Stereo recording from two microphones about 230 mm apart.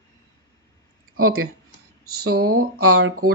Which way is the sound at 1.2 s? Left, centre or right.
Right.